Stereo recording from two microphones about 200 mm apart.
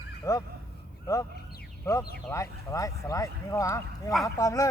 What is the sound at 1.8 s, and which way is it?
Speech, 15° left (ahead or behind).